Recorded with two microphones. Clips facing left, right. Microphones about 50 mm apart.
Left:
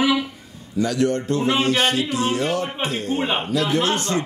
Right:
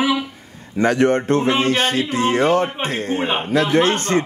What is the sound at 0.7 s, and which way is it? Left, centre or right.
A man's voice, right.